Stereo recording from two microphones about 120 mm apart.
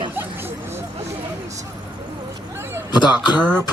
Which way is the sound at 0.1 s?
15° right (ahead or behind).